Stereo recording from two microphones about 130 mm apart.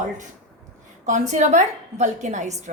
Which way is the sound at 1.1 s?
70° right (ahead or behind).